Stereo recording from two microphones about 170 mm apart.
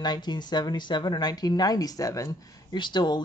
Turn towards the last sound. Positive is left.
turn(degrees=25)  # may be behind; listen again after turning